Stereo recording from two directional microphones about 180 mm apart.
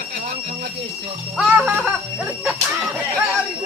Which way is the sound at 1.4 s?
5° right (ahead or behind).